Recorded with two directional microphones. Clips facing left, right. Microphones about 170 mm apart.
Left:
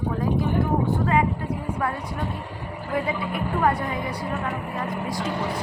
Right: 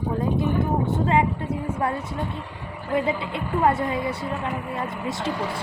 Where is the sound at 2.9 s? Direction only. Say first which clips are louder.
Right 2 dB; 25° right (ahead or behind).